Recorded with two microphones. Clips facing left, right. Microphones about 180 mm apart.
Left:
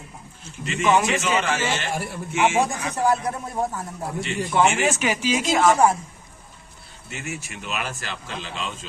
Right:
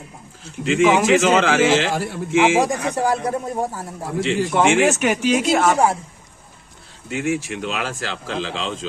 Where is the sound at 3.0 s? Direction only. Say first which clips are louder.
Left 1 dB; 35° right (ahead or behind).